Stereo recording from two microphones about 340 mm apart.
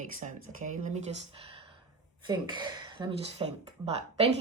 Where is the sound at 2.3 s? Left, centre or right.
Centre.